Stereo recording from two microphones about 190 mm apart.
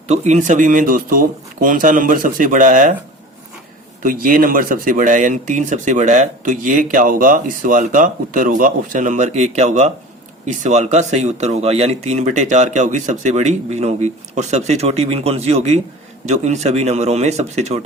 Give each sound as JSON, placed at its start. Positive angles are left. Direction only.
{"t": 0.1, "sound": "speech", "side_deg": -40}
{"t": 4.0, "sound": "speech", "side_deg": -45}